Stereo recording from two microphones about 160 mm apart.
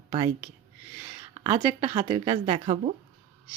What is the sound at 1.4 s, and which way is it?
Speech, 20° right (ahead or behind).